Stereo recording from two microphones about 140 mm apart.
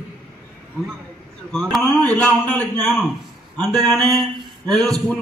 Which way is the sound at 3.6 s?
25° right (ahead or behind).